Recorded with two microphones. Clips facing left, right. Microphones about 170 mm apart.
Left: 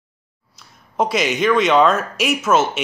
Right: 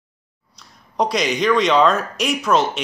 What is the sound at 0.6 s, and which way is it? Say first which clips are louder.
Speech: left 1 dB; 5° left (ahead or behind).